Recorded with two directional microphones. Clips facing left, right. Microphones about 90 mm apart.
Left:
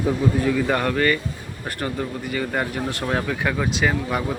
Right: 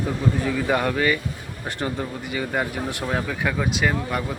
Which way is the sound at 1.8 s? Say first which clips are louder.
Left 1 dB; 20° right (ahead or behind).